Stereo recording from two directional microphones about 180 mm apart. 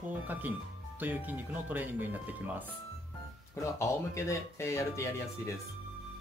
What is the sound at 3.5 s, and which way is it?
Speech, 15° left (ahead or behind).